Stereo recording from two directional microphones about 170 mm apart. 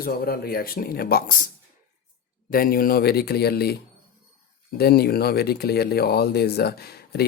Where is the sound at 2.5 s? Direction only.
60° left (ahead or behind).